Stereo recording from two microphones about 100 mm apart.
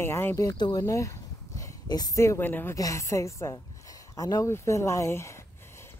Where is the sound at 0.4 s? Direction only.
45° left (ahead or behind).